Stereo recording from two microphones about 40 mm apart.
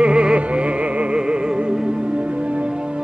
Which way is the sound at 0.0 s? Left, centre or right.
Right.